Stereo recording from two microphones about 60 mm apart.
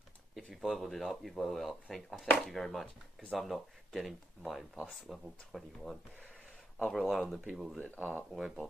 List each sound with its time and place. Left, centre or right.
0.5 s speech: centre
7.7 s speech: left
8.3 s speech: centre